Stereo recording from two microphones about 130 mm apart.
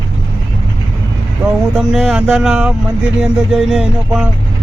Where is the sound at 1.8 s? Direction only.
5° right (ahead or behind).